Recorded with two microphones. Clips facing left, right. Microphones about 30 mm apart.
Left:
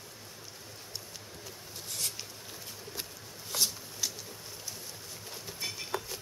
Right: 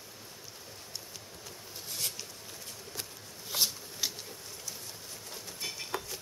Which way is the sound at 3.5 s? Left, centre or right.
Centre.